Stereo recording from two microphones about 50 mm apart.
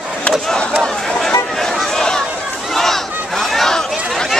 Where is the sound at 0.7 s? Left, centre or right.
Centre.